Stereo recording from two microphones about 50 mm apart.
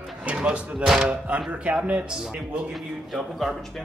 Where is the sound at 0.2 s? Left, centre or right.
Right.